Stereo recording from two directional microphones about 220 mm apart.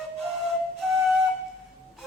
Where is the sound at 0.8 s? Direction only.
Centre (ahead or behind).